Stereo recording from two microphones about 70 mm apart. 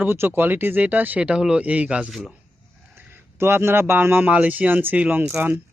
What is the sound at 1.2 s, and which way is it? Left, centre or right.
Speech, centre.